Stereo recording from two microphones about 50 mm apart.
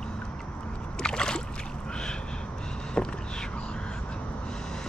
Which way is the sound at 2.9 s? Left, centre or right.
Centre.